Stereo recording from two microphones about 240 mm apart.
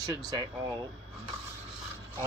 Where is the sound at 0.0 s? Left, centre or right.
Centre.